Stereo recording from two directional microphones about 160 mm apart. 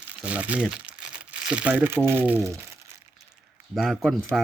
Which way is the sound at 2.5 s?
20° right (ahead or behind).